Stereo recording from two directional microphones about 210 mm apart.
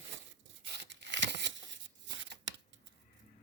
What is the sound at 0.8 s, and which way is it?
Tearing, 55° right (ahead or behind).